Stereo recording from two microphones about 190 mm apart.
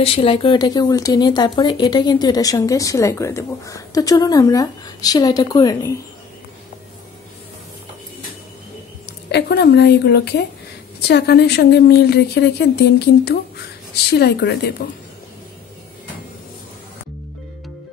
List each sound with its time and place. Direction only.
0.0 s speech: 30° left (ahead or behind)
9.3 s speech: 60° left (ahead or behind)